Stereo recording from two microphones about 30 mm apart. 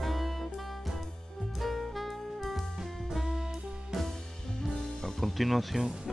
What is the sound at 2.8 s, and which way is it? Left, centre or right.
Music, centre.